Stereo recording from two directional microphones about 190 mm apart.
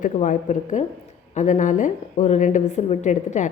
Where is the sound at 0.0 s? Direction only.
40° left (ahead or behind).